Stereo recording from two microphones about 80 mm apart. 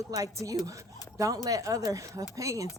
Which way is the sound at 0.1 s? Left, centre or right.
Right.